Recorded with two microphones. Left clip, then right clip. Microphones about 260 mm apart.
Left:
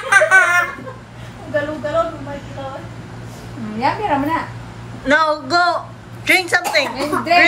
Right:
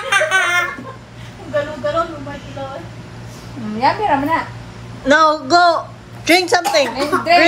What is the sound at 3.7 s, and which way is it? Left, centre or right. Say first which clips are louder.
Speech: right 3 dB; right.